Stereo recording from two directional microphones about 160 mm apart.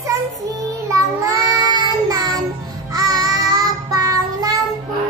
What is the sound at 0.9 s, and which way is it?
Child singing, 20° right (ahead or behind).